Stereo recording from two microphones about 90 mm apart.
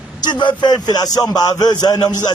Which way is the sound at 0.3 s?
60° left (ahead or behind).